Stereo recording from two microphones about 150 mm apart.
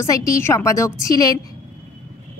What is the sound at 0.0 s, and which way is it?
Speech, 20° left (ahead or behind).